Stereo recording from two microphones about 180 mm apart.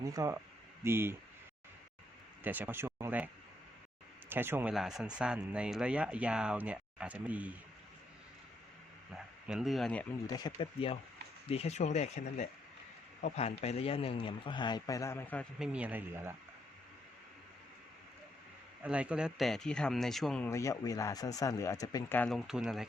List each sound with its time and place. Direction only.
0.0 s speech: 20° right (ahead or behind)
2.4 s speech: 10° right (ahead or behind)
4.3 s speech: 10° right (ahead or behind)
9.1 s speech: centre (ahead or behind)
10.2 s a man's voice: 20° left (ahead or behind)
15.5 s speech: 5° right (ahead or behind)
18.8 s speech: 5° right (ahead or behind)
20.5 s a man's voice: 15° left (ahead or behind)
22.2 s speech: centre (ahead or behind)